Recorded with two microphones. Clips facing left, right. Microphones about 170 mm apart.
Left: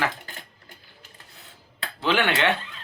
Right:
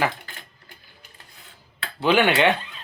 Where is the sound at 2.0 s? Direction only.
15° right (ahead or behind).